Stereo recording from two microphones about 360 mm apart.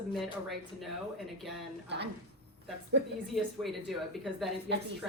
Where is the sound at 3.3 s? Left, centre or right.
Centre.